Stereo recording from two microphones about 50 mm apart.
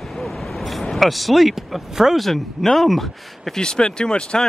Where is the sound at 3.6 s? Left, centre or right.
Centre.